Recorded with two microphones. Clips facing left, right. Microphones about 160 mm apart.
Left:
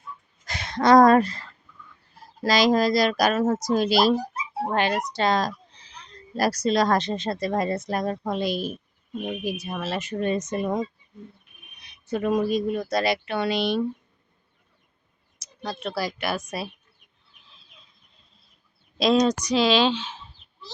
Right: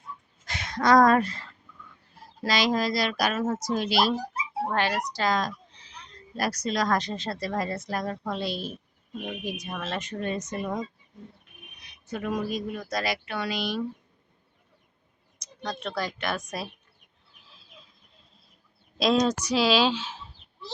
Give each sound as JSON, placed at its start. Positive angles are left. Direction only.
{"t": 0.4, "sound": "speech", "side_deg": 35}
{"t": 4.7, "sound": "a woman's voice", "side_deg": 20}
{"t": 10.2, "sound": "speech", "side_deg": 20}
{"t": 12.0, "sound": "speech", "side_deg": 30}
{"t": 15.4, "sound": "speech", "side_deg": 5}
{"t": 17.4, "sound": "a sound", "side_deg": -5}
{"t": 18.9, "sound": "speech", "side_deg": 0}